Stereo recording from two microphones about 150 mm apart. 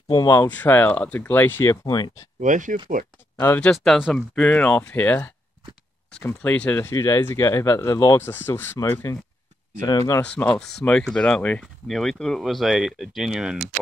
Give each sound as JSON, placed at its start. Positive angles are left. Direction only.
{"t": 0.1, "sound": "speech", "side_deg": 25}
{"t": 2.4, "sound": "speech", "side_deg": -55}
{"t": 3.4, "sound": "speech", "side_deg": 10}
{"t": 3.7, "sound": "speech", "side_deg": 0}
{"t": 10.2, "sound": "speech", "side_deg": 10}